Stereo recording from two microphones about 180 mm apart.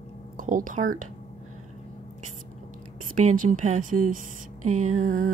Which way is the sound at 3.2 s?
45° right (ahead or behind).